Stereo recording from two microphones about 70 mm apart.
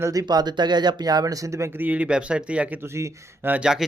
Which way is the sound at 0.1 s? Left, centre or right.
Right.